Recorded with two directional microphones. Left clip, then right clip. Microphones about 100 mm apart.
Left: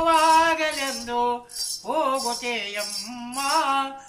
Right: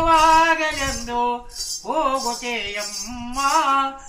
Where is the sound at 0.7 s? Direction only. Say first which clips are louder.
Right 2 dB; 40° left (ahead or behind).